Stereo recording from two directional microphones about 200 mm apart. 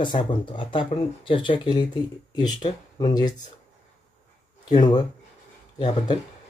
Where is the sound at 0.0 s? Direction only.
25° left (ahead or behind).